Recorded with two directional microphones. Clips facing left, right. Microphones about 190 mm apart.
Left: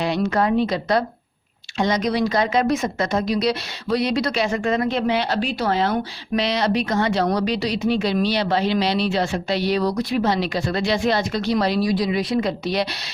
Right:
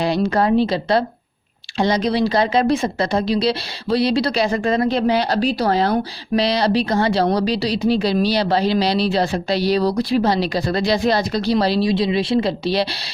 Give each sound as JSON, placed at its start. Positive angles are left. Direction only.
{"t": 0.0, "sound": "speech", "side_deg": -35}